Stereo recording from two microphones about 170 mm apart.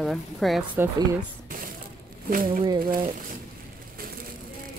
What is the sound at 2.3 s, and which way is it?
Speech, 55° right (ahead or behind).